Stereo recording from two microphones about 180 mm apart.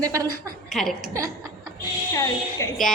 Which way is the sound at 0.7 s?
Centre (ahead or behind).